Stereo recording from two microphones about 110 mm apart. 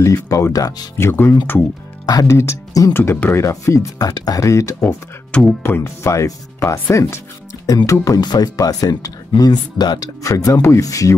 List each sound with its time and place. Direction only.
0.0 s speech: 30° left (ahead or behind)
0.9 s speech: 20° left (ahead or behind)